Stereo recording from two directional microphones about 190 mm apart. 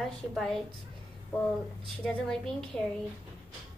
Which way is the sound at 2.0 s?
5° left (ahead or behind).